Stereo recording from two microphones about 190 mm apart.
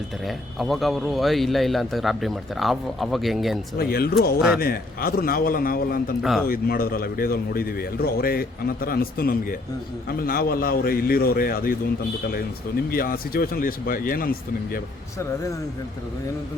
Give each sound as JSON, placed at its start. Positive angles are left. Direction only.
{"t": 0.3, "sound": "a man's voice", "side_deg": 0}
{"t": 3.8, "sound": "speech", "side_deg": 55}
{"t": 4.4, "sound": "a man's voice", "side_deg": -5}
{"t": 4.6, "sound": "speech", "side_deg": 50}
{"t": 12.9, "sound": "speech", "side_deg": 50}